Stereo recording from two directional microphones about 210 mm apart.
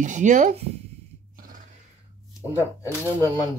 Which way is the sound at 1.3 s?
40° right (ahead or behind).